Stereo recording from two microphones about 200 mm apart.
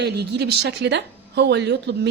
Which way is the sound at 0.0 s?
55° right (ahead or behind).